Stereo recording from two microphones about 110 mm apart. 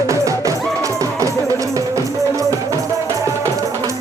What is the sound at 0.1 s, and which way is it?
Music, 30° right (ahead or behind).